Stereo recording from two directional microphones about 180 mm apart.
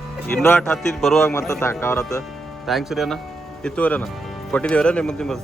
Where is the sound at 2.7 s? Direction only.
Centre (ahead or behind).